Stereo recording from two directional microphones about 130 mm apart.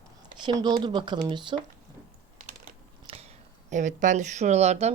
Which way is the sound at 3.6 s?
70° right (ahead or behind).